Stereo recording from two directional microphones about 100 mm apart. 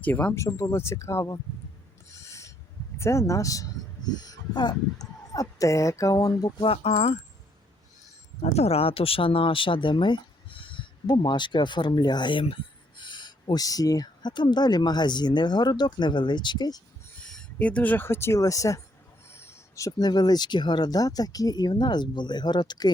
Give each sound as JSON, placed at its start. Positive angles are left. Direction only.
{"t": 0.0, "sound": "speech", "side_deg": 15}
{"t": 0.3, "sound": "speech", "side_deg": 30}
{"t": 2.0, "sound": "owl", "side_deg": 30}
{"t": 3.0, "sound": "speech", "side_deg": 30}
{"t": 6.6, "sound": "speech", "side_deg": 80}
{"t": 8.4, "sound": "speech", "side_deg": 90}
{"t": 17.2, "sound": "speech", "side_deg": 10}